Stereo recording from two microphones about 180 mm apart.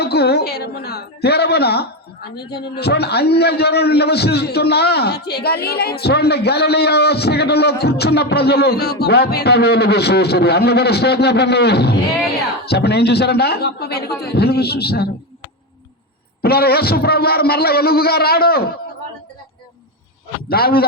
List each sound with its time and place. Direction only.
0.0 s a woman's voice: 65° left (ahead or behind)
16.4 s a woman's voice: 60° left (ahead or behind)
20.5 s a woman's voice: 60° left (ahead or behind)